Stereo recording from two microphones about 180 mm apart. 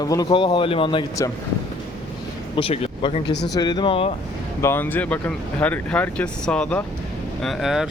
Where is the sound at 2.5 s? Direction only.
30° left (ahead or behind).